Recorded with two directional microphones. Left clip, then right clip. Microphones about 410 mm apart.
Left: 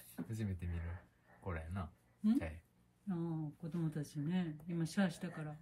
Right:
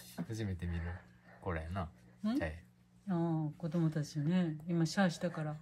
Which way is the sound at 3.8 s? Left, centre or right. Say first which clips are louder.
Right 5 dB; centre.